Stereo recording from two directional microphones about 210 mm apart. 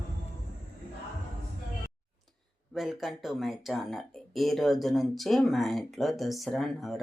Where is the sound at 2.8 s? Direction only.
Centre (ahead or behind).